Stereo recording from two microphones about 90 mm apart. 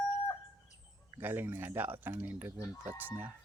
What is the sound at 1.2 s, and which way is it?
Speech, 25° right (ahead or behind).